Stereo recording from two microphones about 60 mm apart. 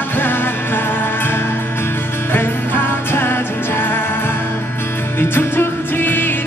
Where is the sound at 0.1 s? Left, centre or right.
Left.